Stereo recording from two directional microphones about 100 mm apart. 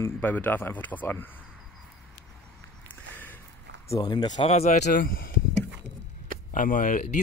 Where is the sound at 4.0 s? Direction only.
45° left (ahead or behind).